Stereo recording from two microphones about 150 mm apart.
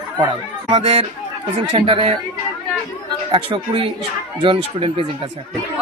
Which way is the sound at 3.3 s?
35° right (ahead or behind).